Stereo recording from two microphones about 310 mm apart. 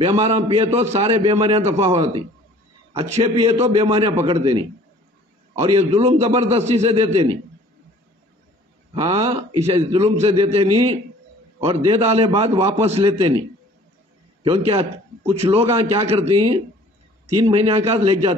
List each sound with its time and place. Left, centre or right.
0.0 s a man's voice: centre
9.0 s a man's voice: centre
14.7 s a man's voice: centre
17.4 s a man's voice: centre